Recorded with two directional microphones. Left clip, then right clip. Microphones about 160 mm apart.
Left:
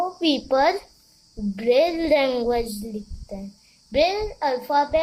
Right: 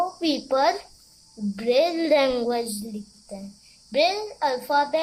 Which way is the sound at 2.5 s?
15° left (ahead or behind).